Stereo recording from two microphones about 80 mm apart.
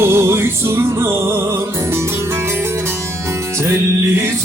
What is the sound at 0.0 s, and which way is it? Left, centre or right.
Music, right.